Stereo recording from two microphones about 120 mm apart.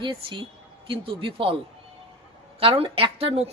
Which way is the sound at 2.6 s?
50° right (ahead or behind).